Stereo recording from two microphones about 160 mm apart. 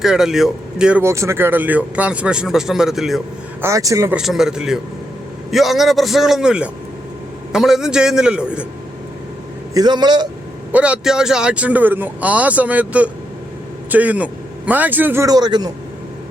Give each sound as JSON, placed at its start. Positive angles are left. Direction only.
{"t": 0.0, "sound": "a man's voice", "side_deg": -5}
{"t": 1.0, "sound": "speech", "side_deg": -20}
{"t": 3.6, "sound": "a man's voice", "side_deg": -20}
{"t": 4.1, "sound": "a man's voice", "side_deg": -5}
{"t": 9.7, "sound": "a man's voice", "side_deg": -25}
{"t": 10.7, "sound": "speech", "side_deg": -10}